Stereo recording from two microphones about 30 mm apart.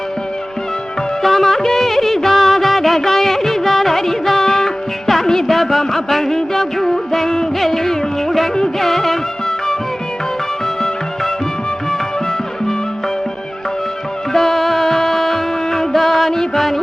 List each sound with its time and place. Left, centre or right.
1.2 s music of bollywood: centre
7.6 s music: centre
14.3 s music: centre